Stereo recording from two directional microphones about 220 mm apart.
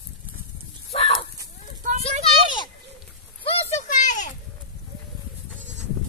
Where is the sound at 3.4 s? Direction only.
35° left (ahead or behind).